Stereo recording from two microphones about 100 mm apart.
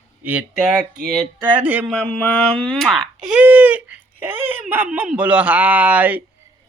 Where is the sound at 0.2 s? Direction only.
15° right (ahead or behind).